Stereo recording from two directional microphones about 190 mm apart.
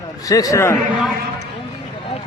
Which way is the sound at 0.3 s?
20° left (ahead or behind).